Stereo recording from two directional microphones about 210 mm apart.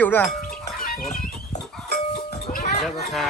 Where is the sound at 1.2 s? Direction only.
35° left (ahead or behind).